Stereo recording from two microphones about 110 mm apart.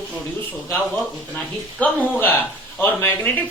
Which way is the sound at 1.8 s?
15° left (ahead or behind).